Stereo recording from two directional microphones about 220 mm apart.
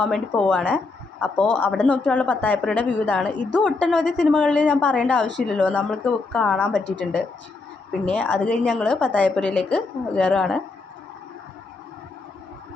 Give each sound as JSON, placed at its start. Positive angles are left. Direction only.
{"t": 0.0, "sound": "a woman's voice", "side_deg": 5}
{"t": 1.7, "sound": "a woman's voice", "side_deg": -5}
{"t": 6.7, "sound": "a woman's voice", "side_deg": -50}
{"t": 8.0, "sound": "a woman's voice", "side_deg": 5}